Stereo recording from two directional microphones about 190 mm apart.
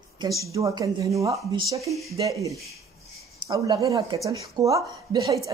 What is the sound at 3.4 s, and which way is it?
Speech, 25° right (ahead or behind).